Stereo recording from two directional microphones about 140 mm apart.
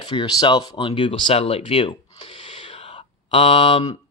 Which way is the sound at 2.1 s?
50° left (ahead or behind).